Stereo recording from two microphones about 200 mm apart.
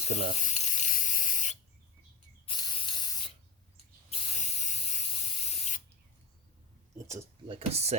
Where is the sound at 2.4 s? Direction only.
20° left (ahead or behind).